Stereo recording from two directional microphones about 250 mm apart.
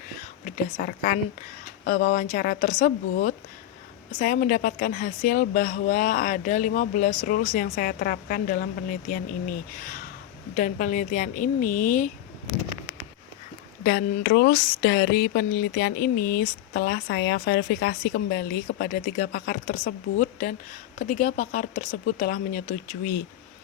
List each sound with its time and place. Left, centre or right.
0.4 s speech: left
13.8 s speech: left